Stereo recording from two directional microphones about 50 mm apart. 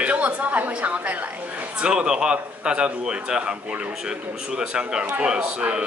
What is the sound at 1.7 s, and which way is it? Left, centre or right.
A woman's voice, centre.